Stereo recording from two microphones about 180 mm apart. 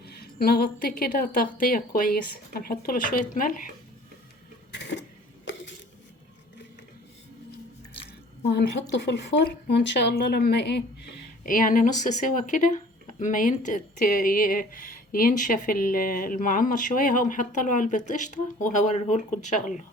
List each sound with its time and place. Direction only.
0.0 s speech: 60° left (ahead or behind)
4.7 s printer: 70° left (ahead or behind)
8.4 s speech: 75° left (ahead or behind)
11.4 s speech: 50° left (ahead or behind)